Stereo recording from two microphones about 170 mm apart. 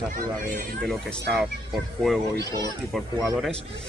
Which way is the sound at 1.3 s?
Centre (ahead or behind).